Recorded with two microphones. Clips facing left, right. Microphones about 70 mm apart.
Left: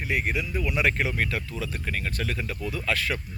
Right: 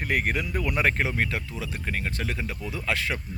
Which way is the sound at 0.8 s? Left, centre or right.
Right.